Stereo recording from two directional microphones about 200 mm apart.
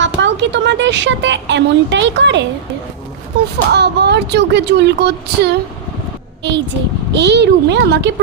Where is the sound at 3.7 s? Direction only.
55° right (ahead or behind).